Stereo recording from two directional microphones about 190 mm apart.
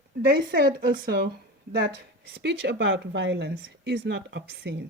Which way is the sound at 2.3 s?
60° right (ahead or behind).